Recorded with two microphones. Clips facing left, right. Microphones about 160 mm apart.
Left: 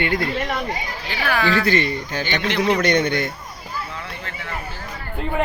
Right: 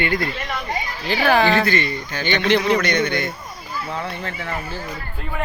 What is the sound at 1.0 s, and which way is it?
Speech, 30° right (ahead or behind).